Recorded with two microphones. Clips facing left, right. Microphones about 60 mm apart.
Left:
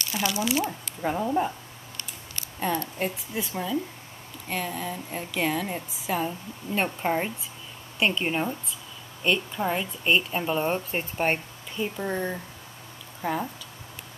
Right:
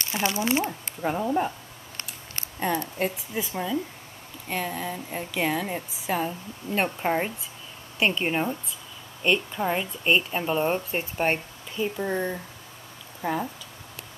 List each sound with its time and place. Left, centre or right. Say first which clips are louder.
0.0 s speech: right 1 dB; right
1.0 s speech: even; centre
2.6 s speech: right 1 dB; centre